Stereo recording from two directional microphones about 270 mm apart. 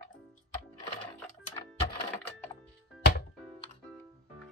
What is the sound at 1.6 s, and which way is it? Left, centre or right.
Music, centre.